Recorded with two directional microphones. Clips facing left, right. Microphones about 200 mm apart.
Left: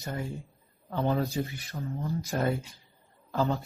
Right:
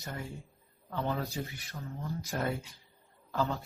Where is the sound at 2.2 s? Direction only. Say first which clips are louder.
Left 5 dB; 40° left (ahead or behind).